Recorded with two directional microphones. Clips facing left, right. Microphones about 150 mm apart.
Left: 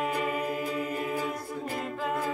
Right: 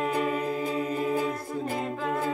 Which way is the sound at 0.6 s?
25° right (ahead or behind).